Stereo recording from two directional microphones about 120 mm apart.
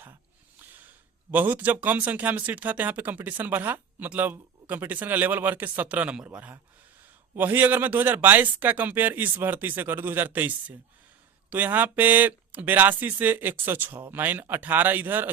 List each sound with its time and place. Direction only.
1.3 s speech: 15° right (ahead or behind)